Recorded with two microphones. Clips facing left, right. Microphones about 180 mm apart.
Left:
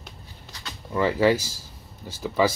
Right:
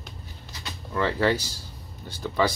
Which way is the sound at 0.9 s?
10° left (ahead or behind).